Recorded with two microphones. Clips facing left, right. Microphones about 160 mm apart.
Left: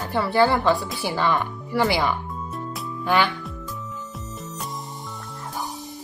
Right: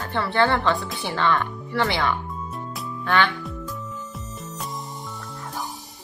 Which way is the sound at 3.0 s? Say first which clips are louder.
Left 1 dB; 10° left (ahead or behind).